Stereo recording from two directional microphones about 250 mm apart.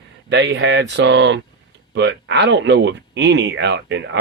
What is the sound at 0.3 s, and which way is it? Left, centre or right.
Speech, right.